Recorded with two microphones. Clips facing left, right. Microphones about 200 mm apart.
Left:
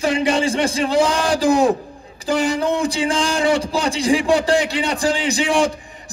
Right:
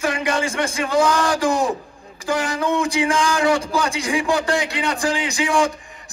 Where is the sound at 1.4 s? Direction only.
65° left (ahead or behind).